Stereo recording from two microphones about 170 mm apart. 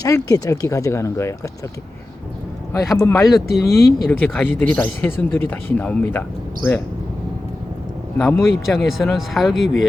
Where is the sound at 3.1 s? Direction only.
Centre (ahead or behind).